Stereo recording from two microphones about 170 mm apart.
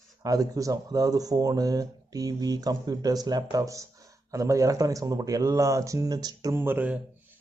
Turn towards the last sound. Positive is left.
turn(degrees=-10)  # may be behind; listen again after turning